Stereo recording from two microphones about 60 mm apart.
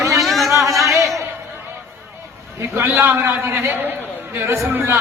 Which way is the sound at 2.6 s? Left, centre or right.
Right.